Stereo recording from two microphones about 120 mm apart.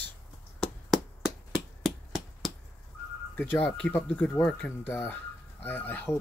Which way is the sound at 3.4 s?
15° left (ahead or behind).